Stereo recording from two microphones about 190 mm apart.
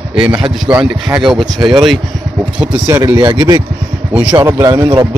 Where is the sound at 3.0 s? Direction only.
20° right (ahead or behind).